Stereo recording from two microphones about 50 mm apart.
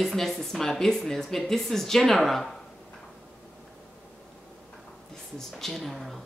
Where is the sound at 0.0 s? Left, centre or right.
Centre.